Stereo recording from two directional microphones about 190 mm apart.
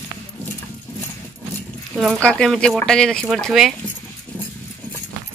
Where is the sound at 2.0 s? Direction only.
5° left (ahead or behind).